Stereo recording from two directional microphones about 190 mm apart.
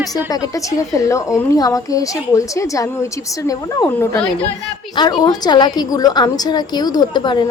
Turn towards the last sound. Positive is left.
turn(degrees=25)  # may be behind; listen again after turning